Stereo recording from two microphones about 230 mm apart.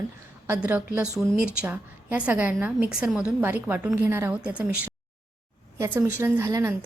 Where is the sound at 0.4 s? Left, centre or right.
Centre.